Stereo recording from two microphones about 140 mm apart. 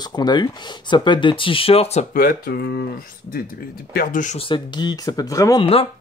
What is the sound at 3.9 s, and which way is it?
Speech, 65° left (ahead or behind).